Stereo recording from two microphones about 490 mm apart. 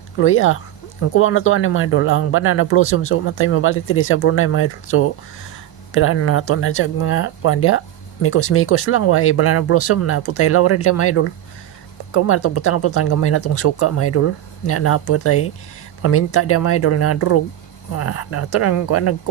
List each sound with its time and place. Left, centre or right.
0.2 s speech: left